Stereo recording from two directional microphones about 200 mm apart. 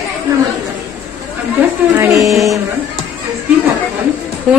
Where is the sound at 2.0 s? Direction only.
15° right (ahead or behind).